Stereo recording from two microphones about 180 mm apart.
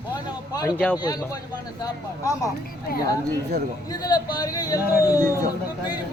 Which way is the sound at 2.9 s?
55° left (ahead or behind).